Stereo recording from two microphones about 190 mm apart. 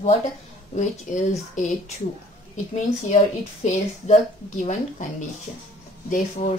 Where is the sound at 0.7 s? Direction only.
40° left (ahead or behind).